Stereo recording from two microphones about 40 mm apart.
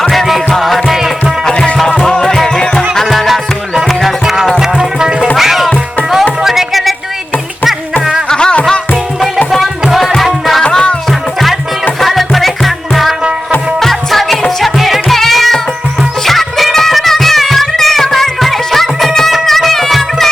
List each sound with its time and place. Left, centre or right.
0.1 s music: centre
1.5 s music: left; by 4.5 s centre
4.5 s music: centre
5.4 s music: centre
8.3 s music: left
10.2 s music: centre
10.6 s music: left
11.9 s music: centre